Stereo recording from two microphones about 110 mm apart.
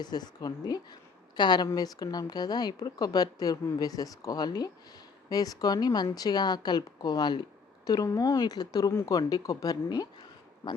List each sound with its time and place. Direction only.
0.0 s speech: 40° left (ahead or behind)
8.9 s speech: 20° left (ahead or behind)
9.1 s speech: 35° left (ahead or behind)